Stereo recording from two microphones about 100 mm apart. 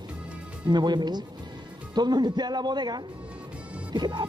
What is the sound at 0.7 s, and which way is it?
Speech, 45° right (ahead or behind).